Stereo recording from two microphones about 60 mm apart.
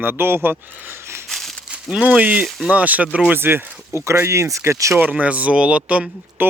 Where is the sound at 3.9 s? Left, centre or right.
Right.